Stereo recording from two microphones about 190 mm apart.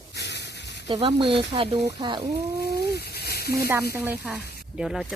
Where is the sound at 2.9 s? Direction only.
55° left (ahead or behind).